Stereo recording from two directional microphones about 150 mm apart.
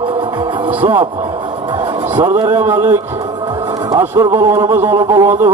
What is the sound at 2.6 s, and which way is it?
Speech, 15° right (ahead or behind).